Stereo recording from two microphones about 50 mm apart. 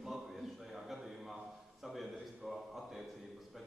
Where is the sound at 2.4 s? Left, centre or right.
Centre.